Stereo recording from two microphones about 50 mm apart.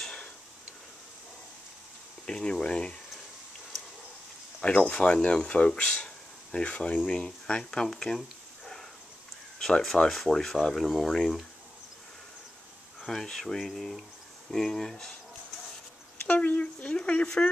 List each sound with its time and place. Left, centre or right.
2.2 s speech: centre
4.6 s speech: centre
5.9 s a sound: centre
7.2 s speech: centre
8.2 s a sound: centre
9.6 s speech: centre
13.0 s speech: centre
16.3 s speech: left